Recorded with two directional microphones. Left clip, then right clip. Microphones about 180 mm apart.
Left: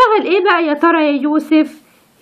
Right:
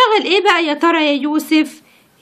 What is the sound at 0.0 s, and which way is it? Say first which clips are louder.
A woman's voice: left 1 dB; 30° right (ahead or behind).